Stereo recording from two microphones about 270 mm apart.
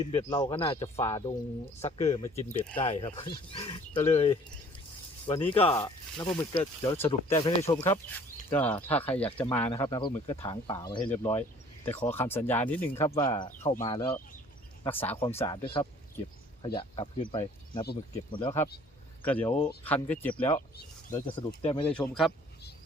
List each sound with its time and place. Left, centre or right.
0.1 s speech: centre
2.0 s speech: centre
2.3 s speech: left; by 9.6 s centre
9.7 s speech: centre
14.8 s speech: centre
16.6 s speech: centre
19.2 s speech: centre
21.1 s speech: centre
21.8 s speech: centre